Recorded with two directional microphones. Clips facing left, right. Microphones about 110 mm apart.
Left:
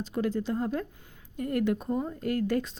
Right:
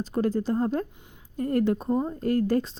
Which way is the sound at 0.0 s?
40° right (ahead or behind).